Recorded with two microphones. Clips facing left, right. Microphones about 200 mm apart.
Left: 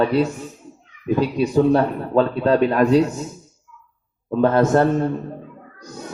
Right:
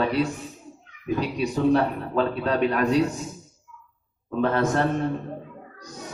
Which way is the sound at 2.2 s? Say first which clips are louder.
Left 6 dB; 30° left (ahead or behind).